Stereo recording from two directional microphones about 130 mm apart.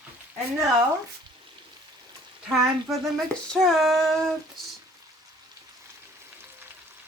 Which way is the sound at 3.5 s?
Centre (ahead or behind).